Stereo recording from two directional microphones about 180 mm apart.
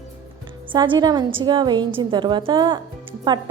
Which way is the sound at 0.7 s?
25° right (ahead or behind).